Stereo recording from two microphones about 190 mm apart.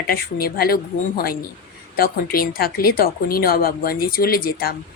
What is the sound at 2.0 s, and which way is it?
Speech, 50° left (ahead or behind).